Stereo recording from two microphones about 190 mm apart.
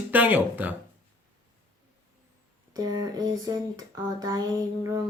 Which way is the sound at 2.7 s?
20° right (ahead or behind).